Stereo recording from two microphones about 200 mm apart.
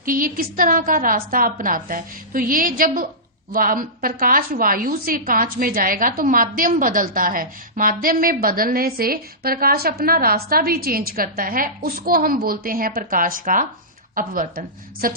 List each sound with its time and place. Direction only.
0.0 s a woman's voice: 45° right (ahead or behind)